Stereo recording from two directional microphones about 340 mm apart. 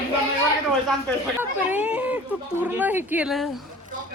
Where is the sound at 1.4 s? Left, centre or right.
Centre.